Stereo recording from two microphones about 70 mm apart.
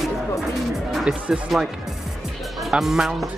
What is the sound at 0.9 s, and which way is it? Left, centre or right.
Speech, centre.